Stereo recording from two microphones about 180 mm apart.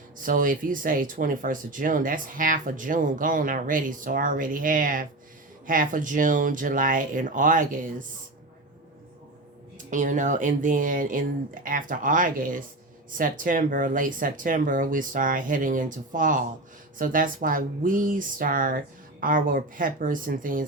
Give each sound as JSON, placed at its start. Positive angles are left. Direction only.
{"t": 0.2, "sound": "speech", "side_deg": -50}
{"t": 9.7, "sound": "speech", "side_deg": -45}